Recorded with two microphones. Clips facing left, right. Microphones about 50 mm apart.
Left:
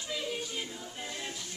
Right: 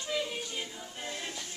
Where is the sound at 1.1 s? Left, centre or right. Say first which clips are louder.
Right 3 dB; right.